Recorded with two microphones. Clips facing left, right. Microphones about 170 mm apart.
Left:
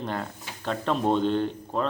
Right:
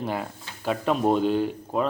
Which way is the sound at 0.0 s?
5° right (ahead or behind).